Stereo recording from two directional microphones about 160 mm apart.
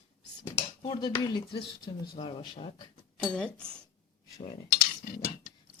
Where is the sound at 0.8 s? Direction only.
30° left (ahead or behind).